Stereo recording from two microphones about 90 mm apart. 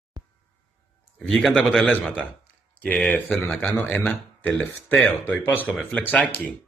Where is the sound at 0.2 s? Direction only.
45° right (ahead or behind).